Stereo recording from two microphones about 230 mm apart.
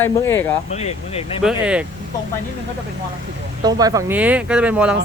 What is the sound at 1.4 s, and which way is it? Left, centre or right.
Speech, centre.